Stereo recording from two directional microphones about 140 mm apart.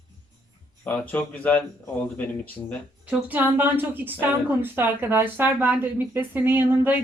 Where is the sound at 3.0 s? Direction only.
15° right (ahead or behind).